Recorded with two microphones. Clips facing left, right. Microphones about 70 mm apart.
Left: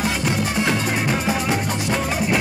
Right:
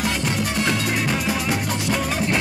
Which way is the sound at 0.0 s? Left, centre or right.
Centre.